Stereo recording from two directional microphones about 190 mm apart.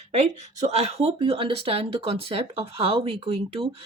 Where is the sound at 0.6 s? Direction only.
35° right (ahead or behind).